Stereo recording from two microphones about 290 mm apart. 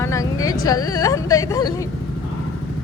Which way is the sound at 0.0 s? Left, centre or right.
Centre.